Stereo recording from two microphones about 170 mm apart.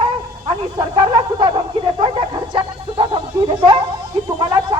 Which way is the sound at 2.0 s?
30° right (ahead or behind).